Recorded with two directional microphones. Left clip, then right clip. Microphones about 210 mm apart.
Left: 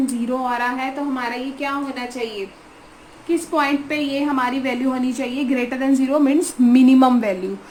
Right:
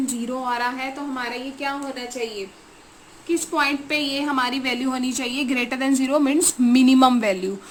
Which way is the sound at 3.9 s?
20° right (ahead or behind).